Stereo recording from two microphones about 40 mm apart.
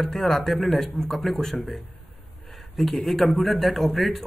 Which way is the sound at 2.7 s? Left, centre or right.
Centre.